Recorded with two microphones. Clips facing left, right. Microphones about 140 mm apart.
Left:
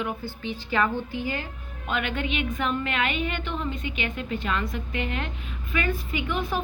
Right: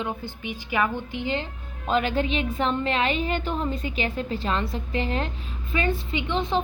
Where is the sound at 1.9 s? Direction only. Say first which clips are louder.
Right 5 dB; 30° right (ahead or behind).